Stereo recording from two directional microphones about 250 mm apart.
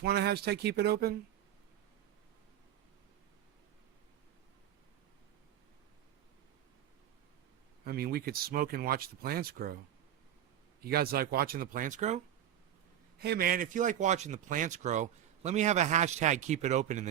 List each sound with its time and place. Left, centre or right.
0.0 s speech: right
7.9 s speech: right
10.8 s speech: right
13.1 s a man's voice: right